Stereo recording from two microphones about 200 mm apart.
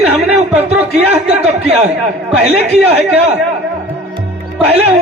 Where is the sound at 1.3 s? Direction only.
30° right (ahead or behind).